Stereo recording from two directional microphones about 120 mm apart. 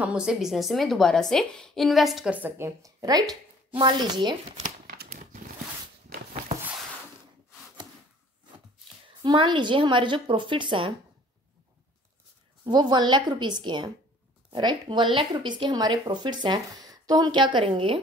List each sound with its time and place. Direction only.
0.0 s a woman's voice: 5° right (ahead or behind)
2.3 s a woman's voice: 20° right (ahead or behind); by 4.4 s 35° right (ahead or behind)
4.6 s crumpling: 85° right
9.2 s speech: 40° right (ahead or behind)
12.6 s speech: 40° right (ahead or behind)